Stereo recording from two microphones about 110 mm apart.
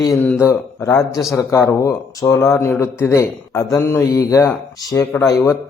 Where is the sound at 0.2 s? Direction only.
20° left (ahead or behind).